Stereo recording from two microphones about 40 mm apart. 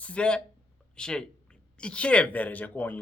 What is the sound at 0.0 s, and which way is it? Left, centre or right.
Speech, left.